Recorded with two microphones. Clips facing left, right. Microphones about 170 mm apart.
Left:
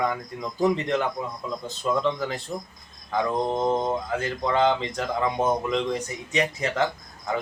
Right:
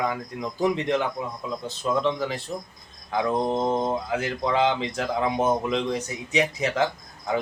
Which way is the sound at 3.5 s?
5° right (ahead or behind).